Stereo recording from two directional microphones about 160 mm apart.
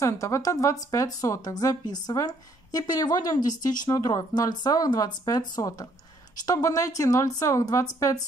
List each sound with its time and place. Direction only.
0.0 s a woman's voice: 20° left (ahead or behind)